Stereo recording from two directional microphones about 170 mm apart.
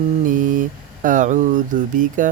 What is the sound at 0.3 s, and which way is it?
Mantra, 50° right (ahead or behind).